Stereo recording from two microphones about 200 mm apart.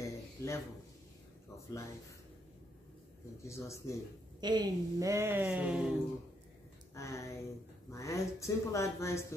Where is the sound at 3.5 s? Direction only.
15° left (ahead or behind).